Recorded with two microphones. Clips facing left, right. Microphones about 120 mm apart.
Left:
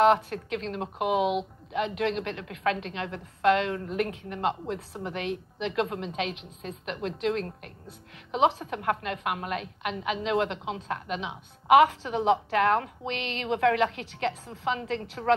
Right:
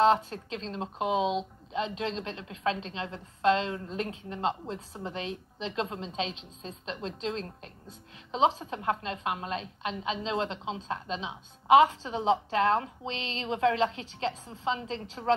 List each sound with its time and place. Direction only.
0.0 s speech: 25° right (ahead or behind)